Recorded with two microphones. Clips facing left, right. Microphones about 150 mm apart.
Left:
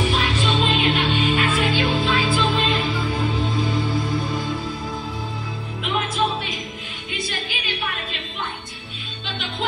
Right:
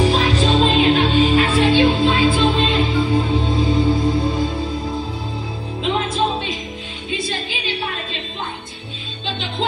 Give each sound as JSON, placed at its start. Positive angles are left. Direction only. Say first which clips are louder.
{"t": 0.0, "sound": "music", "louder": "right 5 dB", "side_deg": -35}
{"t": 5.8, "sound": "music", "louder": "right 3 dB", "side_deg": -30}